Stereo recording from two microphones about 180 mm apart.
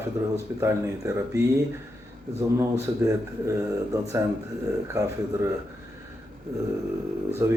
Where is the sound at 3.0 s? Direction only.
15° right (ahead or behind).